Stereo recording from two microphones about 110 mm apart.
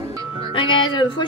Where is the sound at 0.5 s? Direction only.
50° left (ahead or behind).